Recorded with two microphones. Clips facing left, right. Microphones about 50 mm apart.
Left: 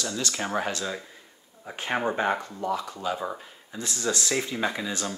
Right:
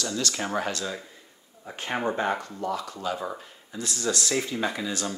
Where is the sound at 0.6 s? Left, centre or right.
Left.